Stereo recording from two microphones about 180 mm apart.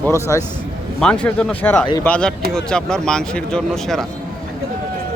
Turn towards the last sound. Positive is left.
turn(degrees=0)  # may be behind; listen again after turning